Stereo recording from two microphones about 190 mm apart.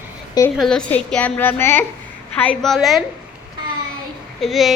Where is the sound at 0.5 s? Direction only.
Centre (ahead or behind).